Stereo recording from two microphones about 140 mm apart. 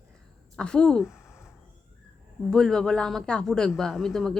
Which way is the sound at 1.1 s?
20° left (ahead or behind).